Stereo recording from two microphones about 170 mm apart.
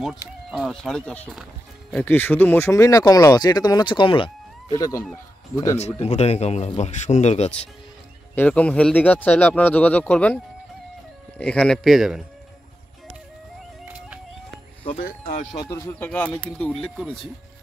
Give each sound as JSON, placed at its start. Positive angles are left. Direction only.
{"t": 0.5, "sound": "speech", "side_deg": 0}
{"t": 2.0, "sound": "speech", "side_deg": 10}
{"t": 5.8, "sound": "speech", "side_deg": 40}
{"t": 8.4, "sound": "speech", "side_deg": 10}
{"t": 13.8, "sound": "music", "side_deg": -10}
{"t": 15.0, "sound": "speech", "side_deg": 50}
{"t": 15.5, "sound": "speech", "side_deg": 20}